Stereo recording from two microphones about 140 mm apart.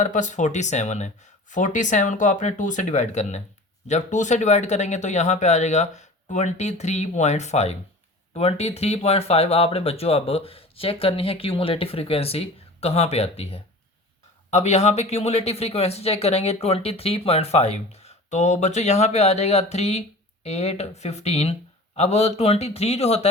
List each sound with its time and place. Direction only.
0.0 s speech: 60° left (ahead or behind)